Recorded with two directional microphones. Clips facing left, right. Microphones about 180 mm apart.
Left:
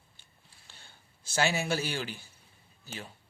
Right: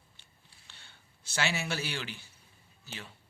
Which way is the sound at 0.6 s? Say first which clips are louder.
Left 2 dB; 40° left (ahead or behind).